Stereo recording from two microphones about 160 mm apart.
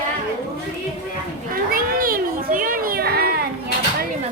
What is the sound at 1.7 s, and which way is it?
Children playing, 65° right (ahead or behind).